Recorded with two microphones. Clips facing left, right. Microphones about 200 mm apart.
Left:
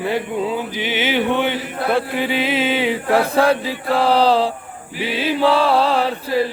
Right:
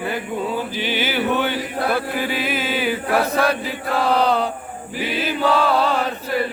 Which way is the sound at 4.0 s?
30° left (ahead or behind).